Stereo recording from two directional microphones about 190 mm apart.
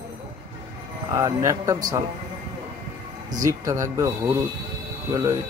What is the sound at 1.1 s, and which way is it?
Speech, 15° right (ahead or behind).